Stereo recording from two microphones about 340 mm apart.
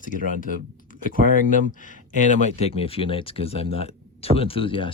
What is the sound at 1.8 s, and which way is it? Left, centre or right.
Speech, left.